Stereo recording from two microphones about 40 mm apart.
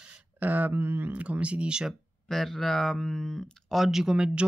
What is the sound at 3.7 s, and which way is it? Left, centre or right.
Speech, centre.